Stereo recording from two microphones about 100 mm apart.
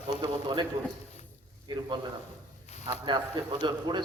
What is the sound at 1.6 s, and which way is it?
A man's voice, 50° right (ahead or behind).